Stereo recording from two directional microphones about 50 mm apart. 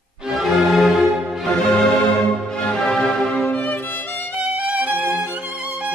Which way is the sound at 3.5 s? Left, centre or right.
Left.